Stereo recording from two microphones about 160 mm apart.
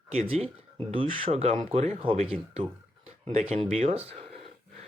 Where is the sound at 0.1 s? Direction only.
40° right (ahead or behind).